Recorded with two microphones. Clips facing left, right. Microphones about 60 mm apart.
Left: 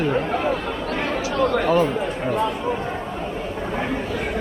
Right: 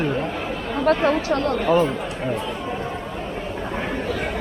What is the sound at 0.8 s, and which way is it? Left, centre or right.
Speech, right.